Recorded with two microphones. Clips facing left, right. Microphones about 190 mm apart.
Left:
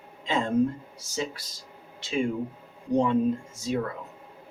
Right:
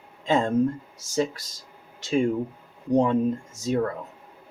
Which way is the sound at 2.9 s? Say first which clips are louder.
Right 2 dB; 40° right (ahead or behind).